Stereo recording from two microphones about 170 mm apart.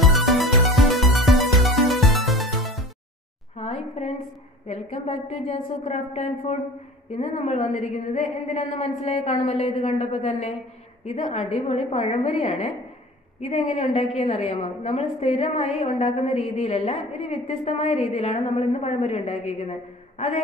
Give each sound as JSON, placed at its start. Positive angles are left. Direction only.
{"t": 0.0, "sound": "music", "side_deg": 0}
{"t": 3.5, "sound": "a sound", "side_deg": 40}
{"t": 4.6, "sound": "a woman's voice", "side_deg": 40}